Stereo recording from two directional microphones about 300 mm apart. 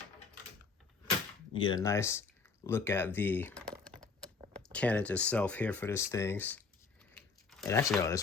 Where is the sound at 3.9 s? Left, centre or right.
Centre.